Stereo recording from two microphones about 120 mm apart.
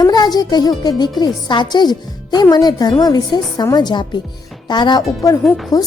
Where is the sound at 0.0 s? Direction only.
35° left (ahead or behind).